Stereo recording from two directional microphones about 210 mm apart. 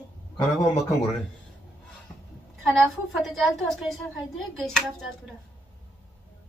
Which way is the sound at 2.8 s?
Centre (ahead or behind).